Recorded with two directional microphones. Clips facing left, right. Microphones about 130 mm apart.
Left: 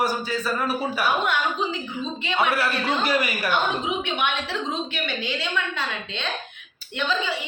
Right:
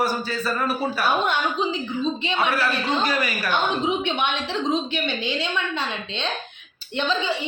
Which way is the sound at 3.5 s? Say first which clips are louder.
Right 3 dB; 25° right (ahead or behind).